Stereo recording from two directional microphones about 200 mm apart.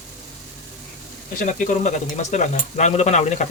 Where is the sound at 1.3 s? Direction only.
40° left (ahead or behind).